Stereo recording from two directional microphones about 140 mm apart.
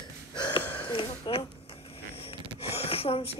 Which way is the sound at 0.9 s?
40° left (ahead or behind).